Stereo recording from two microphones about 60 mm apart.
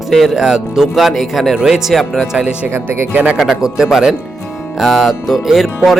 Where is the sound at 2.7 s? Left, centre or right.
Right.